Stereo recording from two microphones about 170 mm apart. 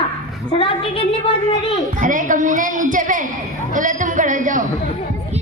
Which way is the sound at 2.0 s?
50° right (ahead or behind).